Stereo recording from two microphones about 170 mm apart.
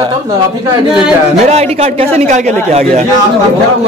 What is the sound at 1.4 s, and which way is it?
A man's voice, 40° right (ahead or behind).